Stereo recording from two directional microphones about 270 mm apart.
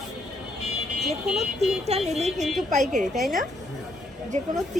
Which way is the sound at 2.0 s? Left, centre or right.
Right.